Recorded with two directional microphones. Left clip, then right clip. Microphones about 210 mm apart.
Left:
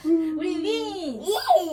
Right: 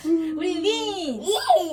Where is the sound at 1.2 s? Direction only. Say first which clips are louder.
Right 1 dB; 5° left (ahead or behind).